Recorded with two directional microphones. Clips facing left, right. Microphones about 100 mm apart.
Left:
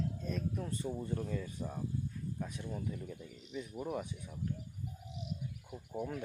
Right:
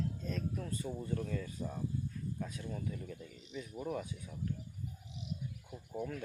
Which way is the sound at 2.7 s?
10° left (ahead or behind).